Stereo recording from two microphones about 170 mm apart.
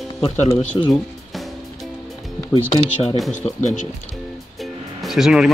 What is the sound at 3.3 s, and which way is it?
Speech, 45° left (ahead or behind).